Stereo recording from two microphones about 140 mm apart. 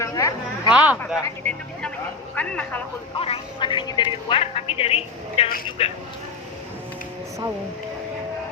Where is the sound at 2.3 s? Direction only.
10° left (ahead or behind).